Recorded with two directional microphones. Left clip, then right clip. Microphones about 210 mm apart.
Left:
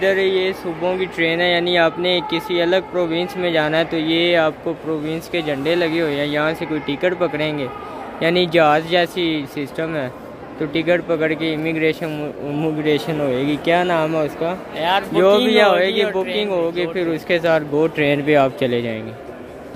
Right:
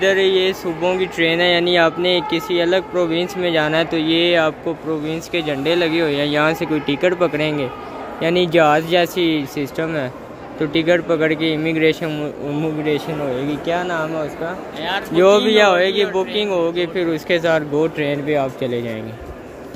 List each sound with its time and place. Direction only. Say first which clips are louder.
0.0 s speech: right 2 dB; centre (ahead or behind)
12.6 s a man's voice: left 2 dB; 10° left (ahead or behind)
14.8 s speech: left 5 dB; 35° left (ahead or behind)
15.1 s speech: right 2 dB; 5° right (ahead or behind)